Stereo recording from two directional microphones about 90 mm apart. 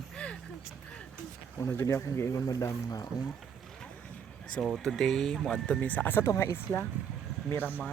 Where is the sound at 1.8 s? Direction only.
35° left (ahead or behind).